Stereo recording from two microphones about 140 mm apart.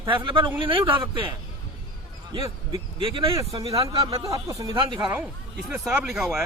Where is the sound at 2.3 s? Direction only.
35° right (ahead or behind).